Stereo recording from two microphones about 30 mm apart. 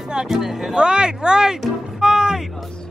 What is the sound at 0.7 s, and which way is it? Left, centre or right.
Speech, right.